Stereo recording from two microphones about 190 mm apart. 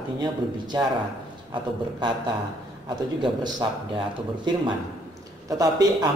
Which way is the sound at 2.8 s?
25° right (ahead or behind).